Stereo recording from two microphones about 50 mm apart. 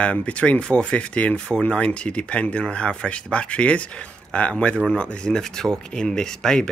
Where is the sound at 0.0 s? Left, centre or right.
Left.